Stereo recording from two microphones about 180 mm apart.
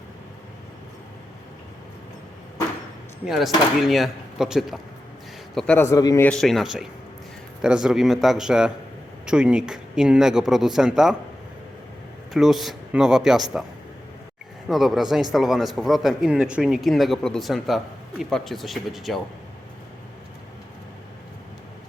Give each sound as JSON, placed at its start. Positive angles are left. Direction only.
{"t": 3.2, "sound": "a man's voice", "side_deg": 0}
{"t": 5.5, "sound": "a man's voice", "side_deg": 10}
{"t": 6.2, "sound": "a man's voice", "side_deg": 0}
{"t": 12.3, "sound": "a man's voice", "side_deg": 0}
{"t": 14.7, "sound": "a man's voice", "side_deg": 0}